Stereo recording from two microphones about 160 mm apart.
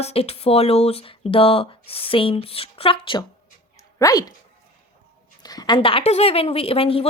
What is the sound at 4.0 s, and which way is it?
Speech, 20° left (ahead or behind).